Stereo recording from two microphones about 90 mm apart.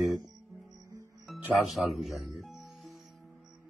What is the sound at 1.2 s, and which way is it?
Music, centre (ahead or behind).